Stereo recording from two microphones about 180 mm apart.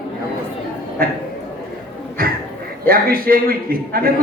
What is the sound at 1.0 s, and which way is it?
Speech, 55° right (ahead or behind).